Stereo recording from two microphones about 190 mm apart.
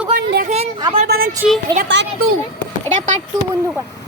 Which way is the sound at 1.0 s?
50° right (ahead or behind).